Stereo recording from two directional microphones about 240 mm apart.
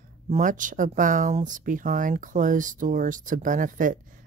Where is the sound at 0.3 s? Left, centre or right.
Right.